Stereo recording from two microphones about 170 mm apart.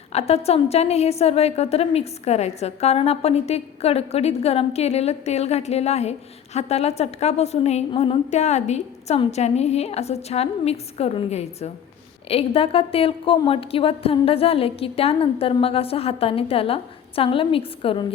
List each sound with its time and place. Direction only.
0.1 s a woman's voice: 40° left (ahead or behind)